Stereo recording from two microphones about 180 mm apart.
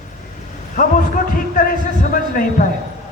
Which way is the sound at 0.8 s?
45° left (ahead or behind).